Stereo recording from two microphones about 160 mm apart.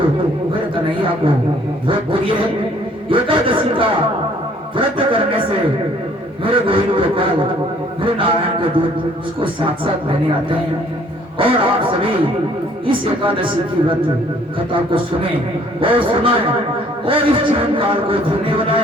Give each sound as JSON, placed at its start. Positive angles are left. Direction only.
{"t": 1.9, "sound": "a man's voice", "side_deg": -30}
{"t": 4.9, "sound": "a man's voice", "side_deg": -30}